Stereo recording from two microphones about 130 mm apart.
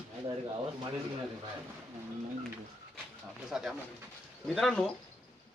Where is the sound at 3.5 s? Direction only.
5° right (ahead or behind).